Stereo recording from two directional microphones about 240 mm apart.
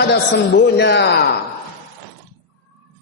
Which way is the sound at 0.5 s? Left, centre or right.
Left.